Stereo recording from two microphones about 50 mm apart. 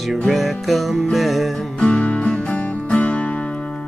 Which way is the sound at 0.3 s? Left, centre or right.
Centre.